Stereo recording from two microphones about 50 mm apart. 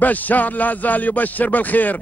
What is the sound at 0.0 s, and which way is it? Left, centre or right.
Speech, left.